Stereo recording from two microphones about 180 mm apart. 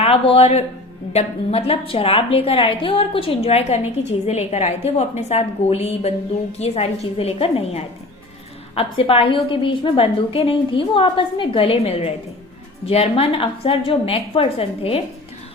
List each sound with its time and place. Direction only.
0.0 s a woman's voice: 30° left (ahead or behind)